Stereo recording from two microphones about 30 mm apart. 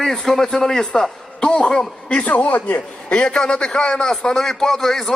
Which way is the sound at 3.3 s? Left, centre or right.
Left.